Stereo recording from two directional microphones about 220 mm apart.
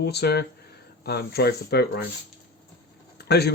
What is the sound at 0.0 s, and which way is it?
Speech, 50° left (ahead or behind).